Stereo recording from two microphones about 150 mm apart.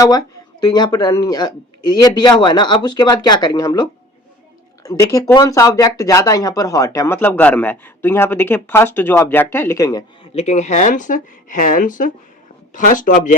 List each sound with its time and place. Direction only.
0.0 s speech: 25° left (ahead or behind)
10.3 s speech: 50° left (ahead or behind)